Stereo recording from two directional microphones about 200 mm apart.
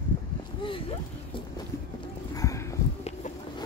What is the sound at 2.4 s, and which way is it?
Clip-clop, 15° left (ahead or behind).